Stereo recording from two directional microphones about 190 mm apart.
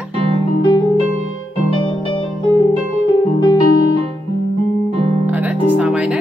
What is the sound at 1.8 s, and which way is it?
Keyboard, 25° left (ahead or behind).